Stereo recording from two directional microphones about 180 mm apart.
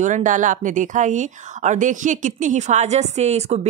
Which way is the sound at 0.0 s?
45° right (ahead or behind).